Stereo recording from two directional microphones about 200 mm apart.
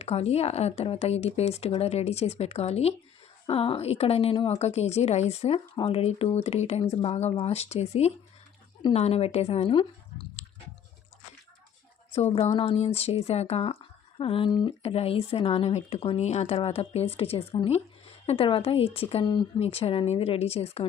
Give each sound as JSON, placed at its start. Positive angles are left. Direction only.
{"t": 0.0, "sound": "speech", "side_deg": 30}
{"t": 12.1, "sound": "speech", "side_deg": 30}